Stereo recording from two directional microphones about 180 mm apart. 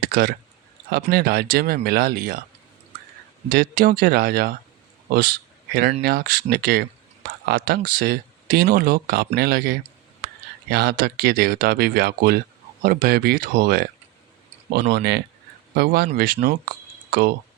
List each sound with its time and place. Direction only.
0.1 s speech: 60° right (ahead or behind)
3.5 s speech: 50° right (ahead or behind)